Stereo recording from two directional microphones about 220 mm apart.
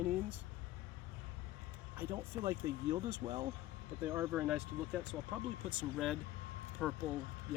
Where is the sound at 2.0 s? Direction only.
15° right (ahead or behind).